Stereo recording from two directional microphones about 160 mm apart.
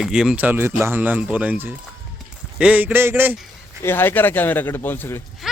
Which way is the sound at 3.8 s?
15° left (ahead or behind).